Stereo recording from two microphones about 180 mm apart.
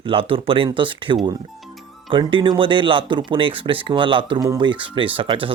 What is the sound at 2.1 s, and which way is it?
Speech, 30° right (ahead or behind).